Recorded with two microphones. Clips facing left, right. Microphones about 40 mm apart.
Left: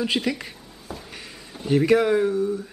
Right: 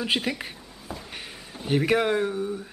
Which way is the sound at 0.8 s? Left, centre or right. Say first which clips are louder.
Left 1 dB; centre.